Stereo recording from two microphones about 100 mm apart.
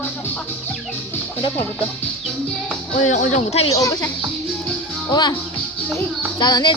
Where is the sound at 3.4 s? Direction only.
90° left.